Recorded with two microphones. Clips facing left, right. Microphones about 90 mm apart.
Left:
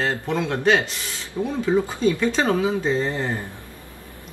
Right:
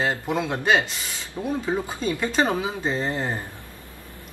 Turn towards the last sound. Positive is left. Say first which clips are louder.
# left 3 dB
turn(degrees=-15)  # may be behind; listen again after turning